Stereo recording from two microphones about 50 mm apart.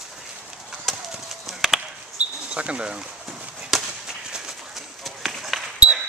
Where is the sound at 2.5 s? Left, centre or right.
Right.